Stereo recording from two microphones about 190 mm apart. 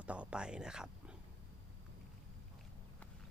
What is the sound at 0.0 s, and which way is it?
Speech, 5° right (ahead or behind).